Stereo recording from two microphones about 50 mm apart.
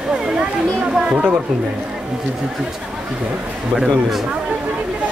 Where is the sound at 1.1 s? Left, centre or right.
Right.